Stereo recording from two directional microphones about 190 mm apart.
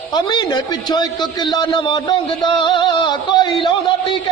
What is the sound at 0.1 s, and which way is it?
A man's voice, 20° left (ahead or behind).